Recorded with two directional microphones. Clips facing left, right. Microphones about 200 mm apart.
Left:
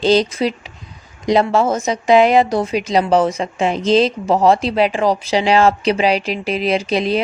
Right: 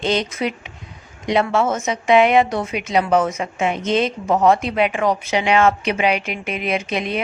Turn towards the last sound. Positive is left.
turn(degrees=35)  # may be behind; listen again after turning